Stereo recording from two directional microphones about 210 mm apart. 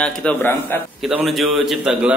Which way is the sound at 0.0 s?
5° left (ahead or behind).